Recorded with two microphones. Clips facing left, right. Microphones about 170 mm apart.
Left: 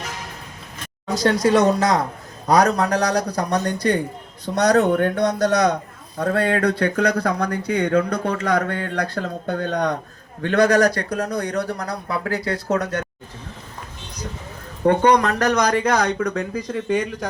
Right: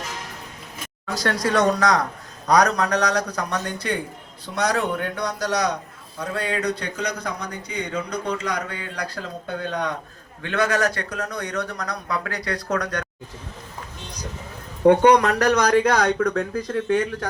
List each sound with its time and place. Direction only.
1.0 s speech: 20° left (ahead or behind)
14.8 s speech: 5° right (ahead or behind)